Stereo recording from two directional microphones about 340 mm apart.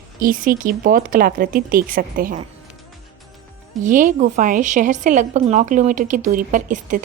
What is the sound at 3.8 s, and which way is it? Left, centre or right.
A woman's voice, right.